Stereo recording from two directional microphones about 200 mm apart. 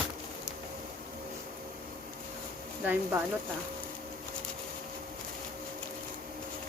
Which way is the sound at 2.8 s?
10° right (ahead or behind).